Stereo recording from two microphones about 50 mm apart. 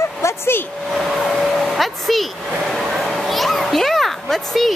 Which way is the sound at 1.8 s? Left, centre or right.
Centre.